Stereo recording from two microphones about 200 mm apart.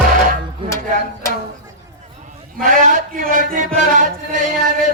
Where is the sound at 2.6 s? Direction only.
40° right (ahead or behind).